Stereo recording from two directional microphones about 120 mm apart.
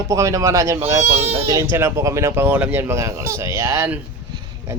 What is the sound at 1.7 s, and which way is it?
Speech, 25° right (ahead or behind).